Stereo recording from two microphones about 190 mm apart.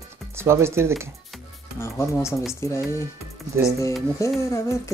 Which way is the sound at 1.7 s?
15° left (ahead or behind).